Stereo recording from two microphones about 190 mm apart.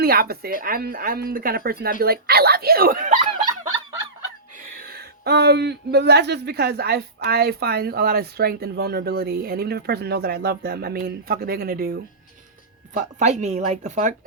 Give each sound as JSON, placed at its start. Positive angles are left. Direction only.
{"t": 0.0, "sound": "speech", "side_deg": -55}
{"t": 4.8, "sound": "speech", "side_deg": -55}
{"t": 13.0, "sound": "speech", "side_deg": -40}